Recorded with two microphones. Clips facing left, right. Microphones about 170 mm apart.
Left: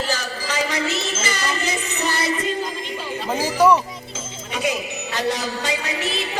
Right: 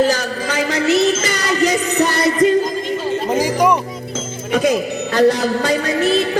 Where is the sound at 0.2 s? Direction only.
60° right (ahead or behind).